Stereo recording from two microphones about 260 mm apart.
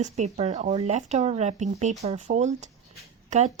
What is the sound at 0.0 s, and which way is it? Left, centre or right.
Speech, right.